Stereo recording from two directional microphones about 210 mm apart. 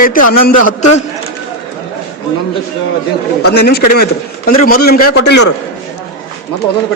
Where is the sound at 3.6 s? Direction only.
50° left (ahead or behind).